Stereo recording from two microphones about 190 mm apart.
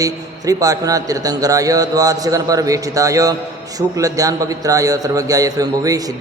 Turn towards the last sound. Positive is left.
turn(degrees=-20)  # may be behind; listen again after turning